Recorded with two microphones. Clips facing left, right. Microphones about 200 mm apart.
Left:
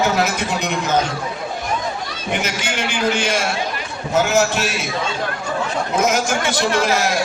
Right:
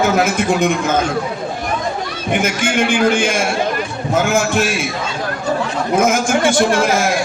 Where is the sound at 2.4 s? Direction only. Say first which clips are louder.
Right 7 dB; 50° right (ahead or behind).